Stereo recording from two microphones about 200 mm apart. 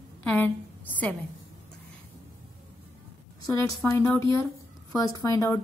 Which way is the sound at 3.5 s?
15° left (ahead or behind).